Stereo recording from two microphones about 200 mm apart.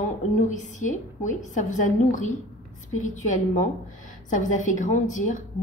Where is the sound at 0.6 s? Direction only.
40° left (ahead or behind).